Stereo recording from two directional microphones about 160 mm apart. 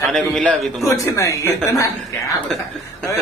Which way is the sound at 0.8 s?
20° left (ahead or behind).